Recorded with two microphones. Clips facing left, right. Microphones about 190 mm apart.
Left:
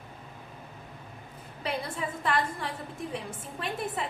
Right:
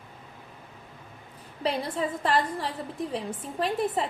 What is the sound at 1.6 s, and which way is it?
A woman's voice, 35° right (ahead or behind).